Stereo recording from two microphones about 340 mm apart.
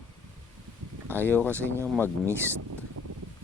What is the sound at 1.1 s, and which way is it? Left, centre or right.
Speech, centre.